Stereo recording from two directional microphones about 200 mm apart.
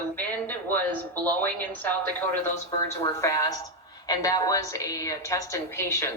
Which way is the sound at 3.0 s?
15° left (ahead or behind).